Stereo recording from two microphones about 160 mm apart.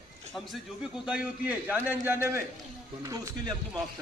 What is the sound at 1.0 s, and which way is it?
A man's voice, 5° right (ahead or behind).